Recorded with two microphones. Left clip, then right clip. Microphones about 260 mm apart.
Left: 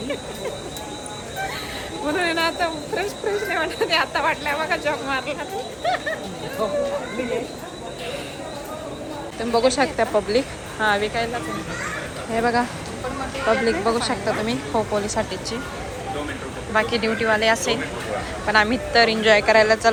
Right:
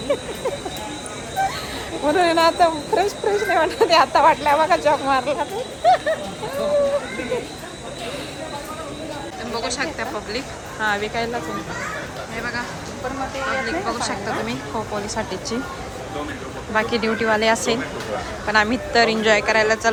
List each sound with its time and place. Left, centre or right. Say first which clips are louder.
2.0 s speech: right 6 dB; centre
9.4 s speech: left 7 dB; centre
12.3 s speech: left 8 dB; centre
13.7 s speech: left 3 dB; centre
16.7 s speech: even; centre